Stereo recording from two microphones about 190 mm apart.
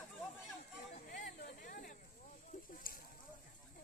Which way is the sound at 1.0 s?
45° left (ahead or behind).